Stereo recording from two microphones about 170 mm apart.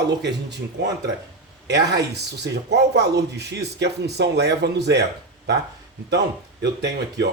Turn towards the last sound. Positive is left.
turn(degrees=-90)